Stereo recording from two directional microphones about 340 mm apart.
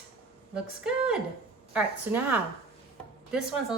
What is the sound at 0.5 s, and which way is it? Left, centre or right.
Speech, centre.